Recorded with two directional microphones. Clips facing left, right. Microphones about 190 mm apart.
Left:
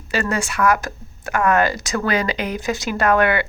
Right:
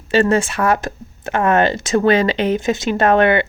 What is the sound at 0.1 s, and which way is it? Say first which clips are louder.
Speech: right 8 dB; 25° right (ahead or behind).